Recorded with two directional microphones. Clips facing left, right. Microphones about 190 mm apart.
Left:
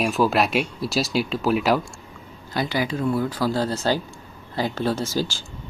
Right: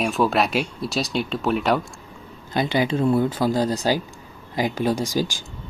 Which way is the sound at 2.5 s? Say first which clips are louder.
Right 3 dB; 20° right (ahead or behind).